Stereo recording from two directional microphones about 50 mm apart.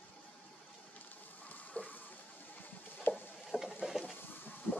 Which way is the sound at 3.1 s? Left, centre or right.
Left.